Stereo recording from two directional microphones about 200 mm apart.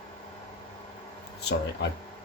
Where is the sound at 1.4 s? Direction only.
55° left (ahead or behind).